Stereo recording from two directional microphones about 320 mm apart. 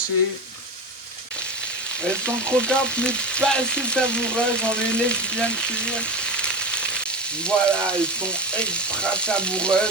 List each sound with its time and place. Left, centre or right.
2.0 s frying: centre